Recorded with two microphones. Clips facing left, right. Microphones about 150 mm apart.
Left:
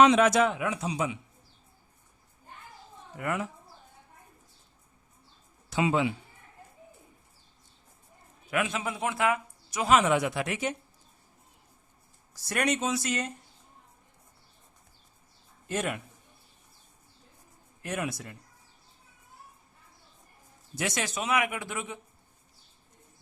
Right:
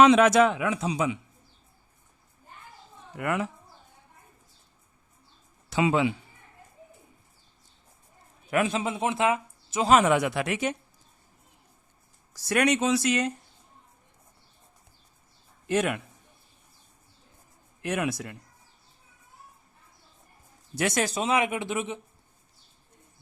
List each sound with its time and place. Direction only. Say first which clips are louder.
0.0 s speech: right 3 dB; 90° right
3.2 s speech: right 3 dB; 75° right (ahead or behind)
5.7 s speech: right 3 dB; 90° right
8.4 s a man's voice: right 4 dB; 35° right (ahead or behind)
8.8 s speech: right 3 dB; 25° right (ahead or behind)
9.9 s speech: right 3 dB; 60° right (ahead or behind); by 10.7 s 75° right (ahead or behind)
12.3 s speech: right 5 dB; 90° right
15.6 s a man's voice: right 6 dB; 80° right
17.8 s speech: right 5 dB; 75° right (ahead or behind)
20.7 s speech: right 5 dB; 50° right (ahead or behind)
21.2 s speech: even; 25° right (ahead or behind)